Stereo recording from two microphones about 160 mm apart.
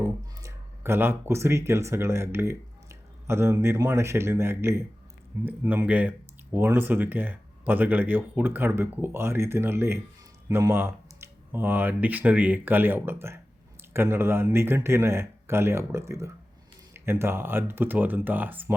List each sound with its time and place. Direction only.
0.0 s speech: 15° right (ahead or behind)